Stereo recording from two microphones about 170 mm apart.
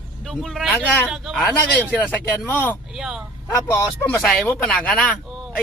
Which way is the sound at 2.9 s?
5° right (ahead or behind).